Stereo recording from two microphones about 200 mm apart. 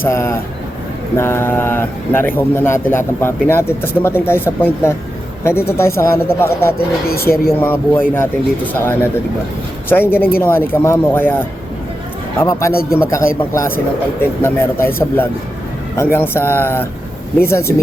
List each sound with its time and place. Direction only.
0.0 s a man's voice: 15° left (ahead or behind)
6.7 s speech: 50° left (ahead or behind)
7.6 s a man's voice: 10° left (ahead or behind)